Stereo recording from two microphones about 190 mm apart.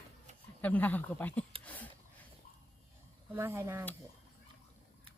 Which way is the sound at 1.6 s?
10° left (ahead or behind).